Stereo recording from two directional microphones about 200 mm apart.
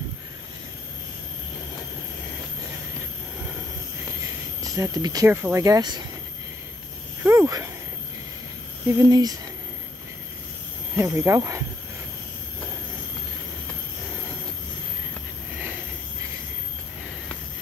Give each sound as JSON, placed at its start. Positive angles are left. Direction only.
{"t": 4.6, "sound": "speech", "side_deg": -15}
{"t": 7.2, "sound": "speech", "side_deg": -15}
{"t": 8.8, "sound": "speech", "side_deg": -15}
{"t": 11.0, "sound": "speech", "side_deg": -10}